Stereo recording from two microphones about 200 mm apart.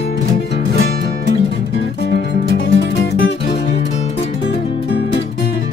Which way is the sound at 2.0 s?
55° left (ahead or behind).